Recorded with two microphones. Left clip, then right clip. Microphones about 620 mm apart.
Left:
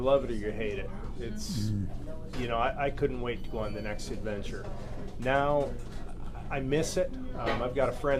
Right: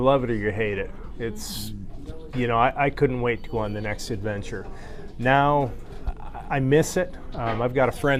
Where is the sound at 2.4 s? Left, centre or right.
Right.